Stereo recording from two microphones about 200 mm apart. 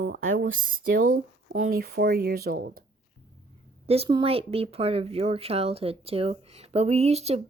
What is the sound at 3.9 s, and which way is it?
Speech, 30° right (ahead or behind).